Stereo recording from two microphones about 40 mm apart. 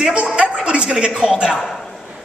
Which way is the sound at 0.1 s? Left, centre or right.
Right.